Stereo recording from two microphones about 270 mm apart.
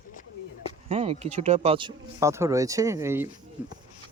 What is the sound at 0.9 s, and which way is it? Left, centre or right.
Speech, right.